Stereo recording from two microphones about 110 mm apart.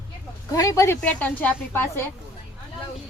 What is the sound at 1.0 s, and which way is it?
A woman's voice, 15° left (ahead or behind).